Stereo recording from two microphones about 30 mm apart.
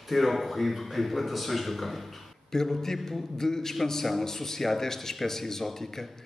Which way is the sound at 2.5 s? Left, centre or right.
Centre.